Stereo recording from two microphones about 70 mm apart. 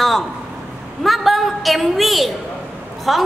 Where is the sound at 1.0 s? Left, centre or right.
Centre.